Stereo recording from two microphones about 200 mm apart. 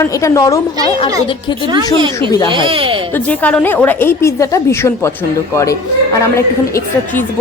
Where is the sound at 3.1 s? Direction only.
5° left (ahead or behind).